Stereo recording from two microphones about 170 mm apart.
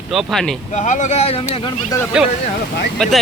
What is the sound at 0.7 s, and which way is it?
Speech, 45° left (ahead or behind).